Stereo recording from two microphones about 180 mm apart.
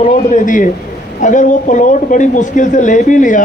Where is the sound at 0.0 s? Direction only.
45° left (ahead or behind).